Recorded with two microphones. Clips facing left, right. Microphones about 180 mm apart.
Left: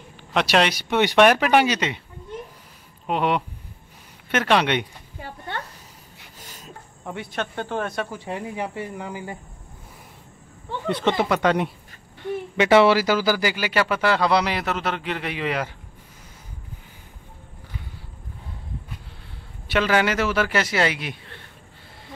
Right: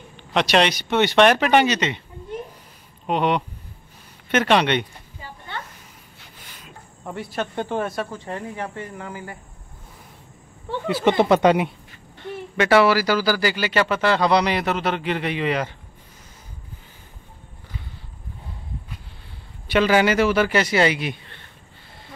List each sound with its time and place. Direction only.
0.3 s speech: 5° left (ahead or behind)
3.1 s speech: 5° left (ahead or behind)
5.2 s a sound: 60° left (ahead or behind)
6.4 s a sound: 45° left (ahead or behind)
7.1 s speech: centre (ahead or behind)
7.5 s speech: 15° right (ahead or behind)
7.8 s speech: centre (ahead or behind)
8.1 s speech: 10° left (ahead or behind)
10.9 s speech: 5° right (ahead or behind)
11.1 s speech: 25° right (ahead or behind)
12.2 s speech: 15° left (ahead or behind)
19.7 s speech: centre (ahead or behind)